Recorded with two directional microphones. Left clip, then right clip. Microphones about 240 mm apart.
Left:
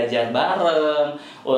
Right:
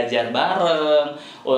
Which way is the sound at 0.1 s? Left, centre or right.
Right.